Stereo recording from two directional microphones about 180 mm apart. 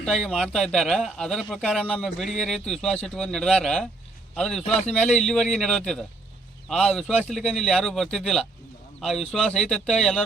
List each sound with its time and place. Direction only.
0.0 s speech: 5° left (ahead or behind)
4.6 s speech: 40° left (ahead or behind)
4.9 s speech: 5° left (ahead or behind)